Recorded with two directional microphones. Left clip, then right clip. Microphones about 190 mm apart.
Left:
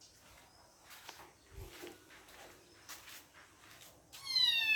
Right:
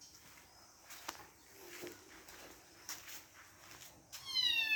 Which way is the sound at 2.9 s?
55° right (ahead or behind).